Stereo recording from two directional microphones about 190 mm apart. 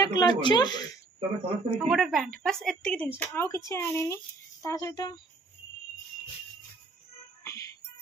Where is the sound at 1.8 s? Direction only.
Centre (ahead or behind).